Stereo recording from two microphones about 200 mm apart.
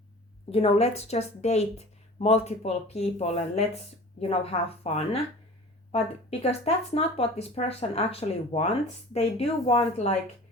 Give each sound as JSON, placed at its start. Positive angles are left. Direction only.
{"t": 0.5, "sound": "a woman's voice", "side_deg": 30}
{"t": 6.4, "sound": "speech", "side_deg": 30}